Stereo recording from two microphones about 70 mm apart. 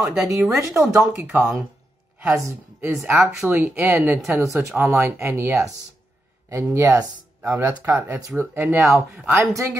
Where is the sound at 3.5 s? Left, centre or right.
Right.